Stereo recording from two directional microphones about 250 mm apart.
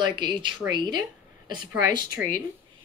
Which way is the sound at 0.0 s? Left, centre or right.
Centre.